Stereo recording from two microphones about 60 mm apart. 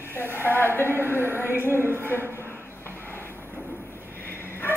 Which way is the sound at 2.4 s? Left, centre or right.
Left.